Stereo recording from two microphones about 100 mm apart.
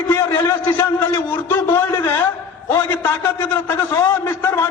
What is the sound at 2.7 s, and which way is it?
A man's voice, 20° left (ahead or behind).